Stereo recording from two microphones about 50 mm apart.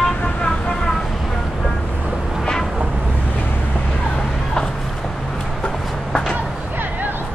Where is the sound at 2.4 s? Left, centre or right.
Centre.